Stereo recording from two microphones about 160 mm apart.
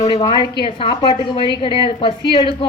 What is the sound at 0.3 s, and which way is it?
A woman's voice, 30° left (ahead or behind).